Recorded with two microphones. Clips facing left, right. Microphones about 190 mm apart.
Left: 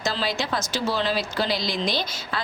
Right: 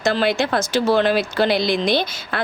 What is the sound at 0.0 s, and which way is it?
Speech, 60° right (ahead or behind).